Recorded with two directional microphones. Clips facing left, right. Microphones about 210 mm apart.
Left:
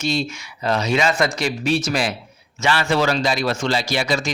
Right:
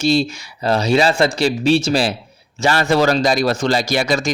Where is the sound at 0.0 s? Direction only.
35° right (ahead or behind).